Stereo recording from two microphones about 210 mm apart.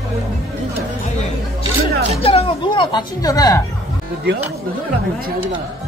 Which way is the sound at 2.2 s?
25° left (ahead or behind).